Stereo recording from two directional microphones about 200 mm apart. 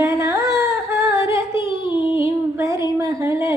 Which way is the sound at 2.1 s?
15° right (ahead or behind).